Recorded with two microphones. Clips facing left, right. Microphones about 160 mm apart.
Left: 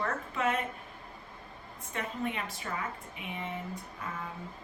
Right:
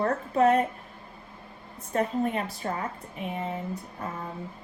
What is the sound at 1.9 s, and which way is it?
A woman's voice, 40° right (ahead or behind).